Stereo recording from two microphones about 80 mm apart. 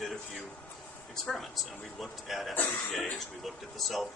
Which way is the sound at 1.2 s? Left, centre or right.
Centre.